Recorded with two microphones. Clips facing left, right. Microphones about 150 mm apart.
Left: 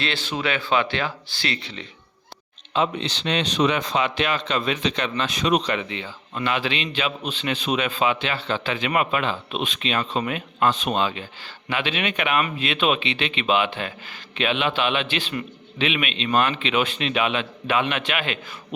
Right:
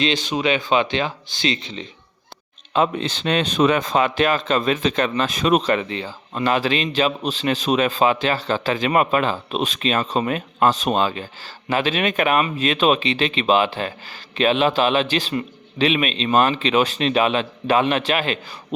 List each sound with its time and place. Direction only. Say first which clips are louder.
0.0 s speech: right 6 dB; 15° right (ahead or behind)
2.7 s speech: right 3 dB; 50° right (ahead or behind)